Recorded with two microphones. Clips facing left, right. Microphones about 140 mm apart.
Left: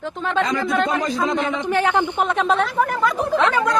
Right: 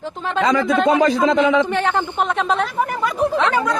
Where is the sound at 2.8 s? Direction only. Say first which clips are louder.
Left 1 dB; 20° right (ahead or behind).